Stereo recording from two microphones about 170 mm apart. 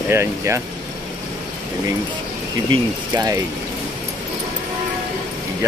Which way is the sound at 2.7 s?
25° right (ahead or behind).